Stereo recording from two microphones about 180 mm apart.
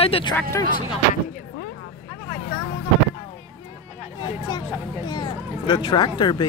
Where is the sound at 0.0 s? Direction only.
30° left (ahead or behind).